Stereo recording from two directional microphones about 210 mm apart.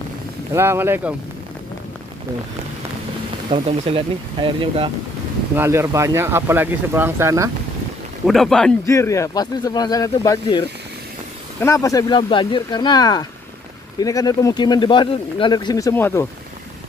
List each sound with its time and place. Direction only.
0.5 s speech: 10° right (ahead or behind)
3.4 s speech: 30° right (ahead or behind)
5.6 s speech: 15° right (ahead or behind)
8.3 s a man's voice: centre (ahead or behind)
8.8 s speech: 15° left (ahead or behind)
11.6 s speech: 15° left (ahead or behind)